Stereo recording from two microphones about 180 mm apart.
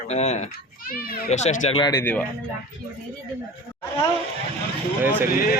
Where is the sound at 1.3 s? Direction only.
40° left (ahead or behind).